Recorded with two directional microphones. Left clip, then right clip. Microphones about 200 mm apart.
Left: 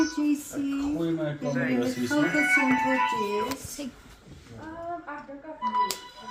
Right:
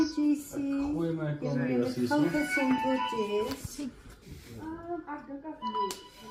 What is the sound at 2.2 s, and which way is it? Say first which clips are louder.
Speech: left 11 dB; 20° left (ahead or behind).